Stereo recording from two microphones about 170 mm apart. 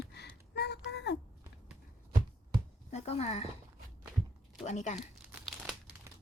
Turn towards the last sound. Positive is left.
turn(degrees=0)  # may be behind; listen again after turning